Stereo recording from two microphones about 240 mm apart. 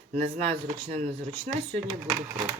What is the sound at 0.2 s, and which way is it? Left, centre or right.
Speech, right.